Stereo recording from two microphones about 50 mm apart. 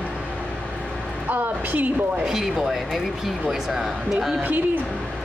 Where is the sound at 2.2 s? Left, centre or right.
Centre.